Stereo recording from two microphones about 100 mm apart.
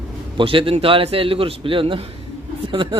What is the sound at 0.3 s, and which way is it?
A man's voice, 60° right (ahead or behind).